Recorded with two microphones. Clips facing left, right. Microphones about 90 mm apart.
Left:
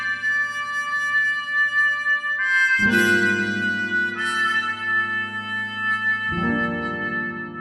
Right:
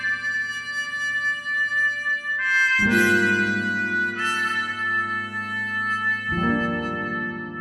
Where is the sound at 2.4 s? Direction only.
15° left (ahead or behind).